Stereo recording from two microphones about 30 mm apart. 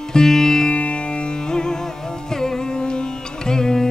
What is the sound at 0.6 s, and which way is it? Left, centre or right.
Music, left.